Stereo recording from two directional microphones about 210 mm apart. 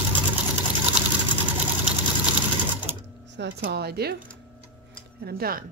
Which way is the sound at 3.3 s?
55° right (ahead or behind).